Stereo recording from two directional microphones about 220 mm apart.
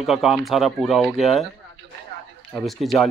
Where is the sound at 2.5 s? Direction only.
Centre (ahead or behind).